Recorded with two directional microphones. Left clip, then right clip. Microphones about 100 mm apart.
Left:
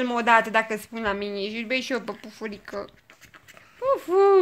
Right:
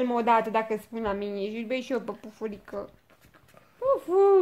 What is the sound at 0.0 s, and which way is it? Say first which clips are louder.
Speech: left 3 dB; 25° right (ahead or behind).